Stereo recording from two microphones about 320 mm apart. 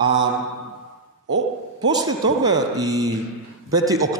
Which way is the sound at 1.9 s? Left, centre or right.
Centre.